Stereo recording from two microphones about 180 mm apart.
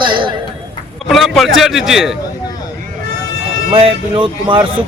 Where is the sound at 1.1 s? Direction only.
Centre (ahead or behind).